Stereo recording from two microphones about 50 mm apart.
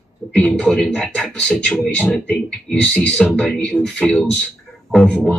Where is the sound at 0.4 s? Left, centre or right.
Left.